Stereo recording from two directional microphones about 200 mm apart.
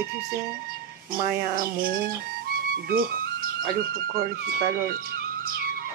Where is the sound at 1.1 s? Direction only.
45° right (ahead or behind).